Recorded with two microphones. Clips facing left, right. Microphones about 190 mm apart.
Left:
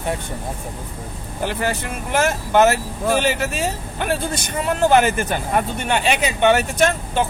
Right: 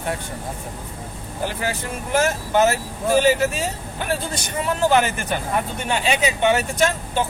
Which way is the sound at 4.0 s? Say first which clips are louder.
Left 3 dB; 60° left (ahead or behind).